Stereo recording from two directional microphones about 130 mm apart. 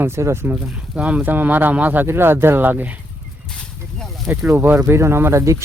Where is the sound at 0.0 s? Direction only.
20° right (ahead or behind).